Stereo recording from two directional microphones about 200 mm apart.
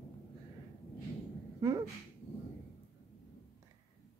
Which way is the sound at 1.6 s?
15° right (ahead or behind).